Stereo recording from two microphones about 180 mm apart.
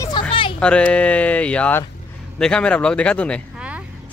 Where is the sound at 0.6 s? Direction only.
5° left (ahead or behind).